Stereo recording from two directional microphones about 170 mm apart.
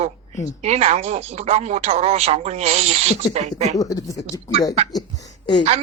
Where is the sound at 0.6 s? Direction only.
40° right (ahead or behind).